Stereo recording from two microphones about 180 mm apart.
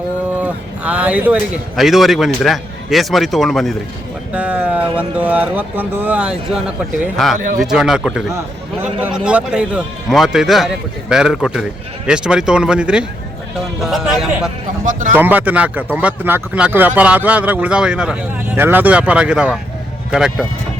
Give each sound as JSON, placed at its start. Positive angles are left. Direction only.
{"t": 0.3, "sound": "speech", "side_deg": -5}
{"t": 7.3, "sound": "speech", "side_deg": -45}
{"t": 7.6, "sound": "speech", "side_deg": 0}
{"t": 14.8, "sound": "speech", "side_deg": -45}
{"t": 15.1, "sound": "speech", "side_deg": -10}